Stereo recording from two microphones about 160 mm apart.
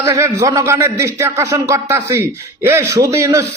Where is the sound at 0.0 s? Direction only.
20° right (ahead or behind).